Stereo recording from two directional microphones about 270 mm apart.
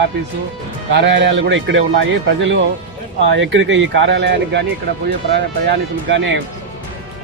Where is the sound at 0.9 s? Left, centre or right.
Right.